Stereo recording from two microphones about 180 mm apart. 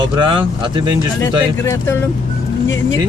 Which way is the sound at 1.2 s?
15° left (ahead or behind).